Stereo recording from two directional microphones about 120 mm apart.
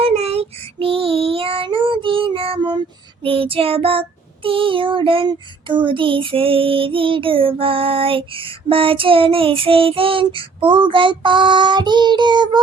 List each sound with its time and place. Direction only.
0.0 s child singing: 55° right (ahead or behind); by 12.5 s 40° right (ahead or behind)